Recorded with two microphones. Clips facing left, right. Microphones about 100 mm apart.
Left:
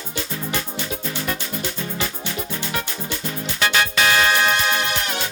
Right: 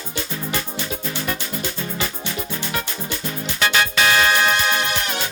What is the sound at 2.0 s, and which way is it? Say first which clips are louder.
Music: even; centre (ahead or behind).